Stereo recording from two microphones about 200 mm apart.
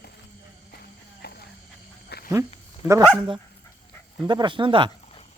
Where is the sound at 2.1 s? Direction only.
55° left (ahead or behind).